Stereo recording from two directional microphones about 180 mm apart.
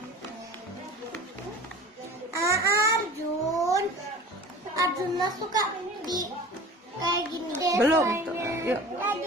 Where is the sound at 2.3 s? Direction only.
15° right (ahead or behind).